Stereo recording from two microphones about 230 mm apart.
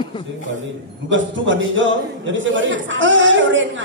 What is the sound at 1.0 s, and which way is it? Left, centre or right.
A man's voice, right.